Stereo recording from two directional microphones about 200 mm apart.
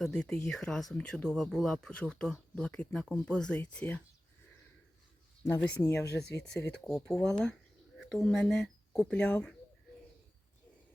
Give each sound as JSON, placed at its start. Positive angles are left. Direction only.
{"t": 0.0, "sound": "speech", "side_deg": 5}
{"t": 5.4, "sound": "speech", "side_deg": 10}
{"t": 6.1, "sound": "speech", "side_deg": 55}
{"t": 6.8, "sound": "speech", "side_deg": 0}